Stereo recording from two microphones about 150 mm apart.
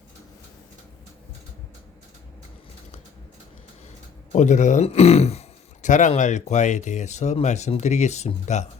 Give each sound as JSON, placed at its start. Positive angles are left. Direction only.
{"t": 4.3, "sound": "a man's voice", "side_deg": 55}